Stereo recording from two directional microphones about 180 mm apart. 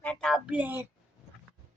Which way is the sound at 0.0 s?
5° left (ahead or behind).